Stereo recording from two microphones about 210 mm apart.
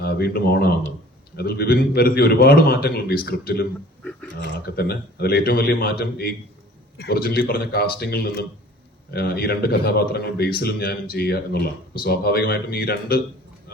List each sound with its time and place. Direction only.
0.0 s a man's voice: 50° left (ahead or behind)
4.0 s a sound: 10° left (ahead or behind)
4.6 s a man's voice: 50° left (ahead or behind)